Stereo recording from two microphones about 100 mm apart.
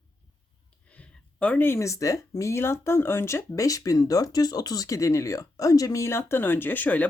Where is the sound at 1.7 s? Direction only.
30° left (ahead or behind).